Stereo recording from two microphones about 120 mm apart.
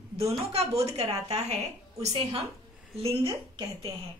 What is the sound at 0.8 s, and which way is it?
Speech, 60° right (ahead or behind).